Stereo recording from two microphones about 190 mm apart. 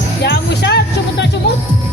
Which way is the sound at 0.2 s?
60° left (ahead or behind).